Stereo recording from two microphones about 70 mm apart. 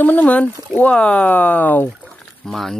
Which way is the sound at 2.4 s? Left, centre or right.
Centre.